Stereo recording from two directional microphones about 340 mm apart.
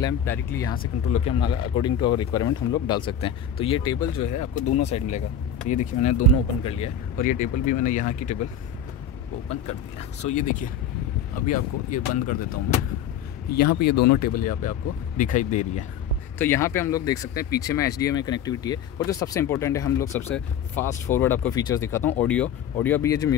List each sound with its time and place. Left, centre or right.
0.0 s speech: centre
4.2 s speech: left
4.8 s speech: centre
10.3 s speech: left
13.6 s speech: left
16.3 s speech: centre